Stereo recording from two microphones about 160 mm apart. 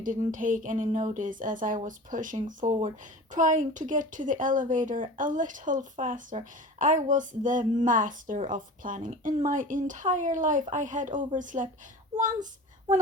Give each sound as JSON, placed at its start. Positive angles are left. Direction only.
{"t": 0.0, "sound": "speech", "side_deg": -55}